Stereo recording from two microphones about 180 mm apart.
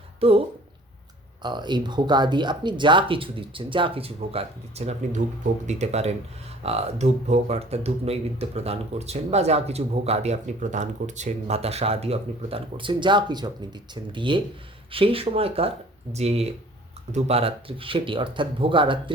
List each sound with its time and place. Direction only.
0.2 s speech: 35° right (ahead or behind)